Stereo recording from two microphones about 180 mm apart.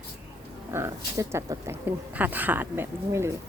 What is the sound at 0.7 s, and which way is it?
Speech, 15° right (ahead or behind).